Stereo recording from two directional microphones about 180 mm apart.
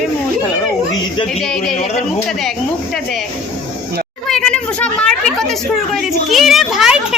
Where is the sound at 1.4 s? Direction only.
5° left (ahead or behind).